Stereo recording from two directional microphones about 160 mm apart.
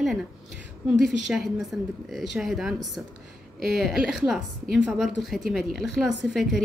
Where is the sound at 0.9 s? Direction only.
5° right (ahead or behind).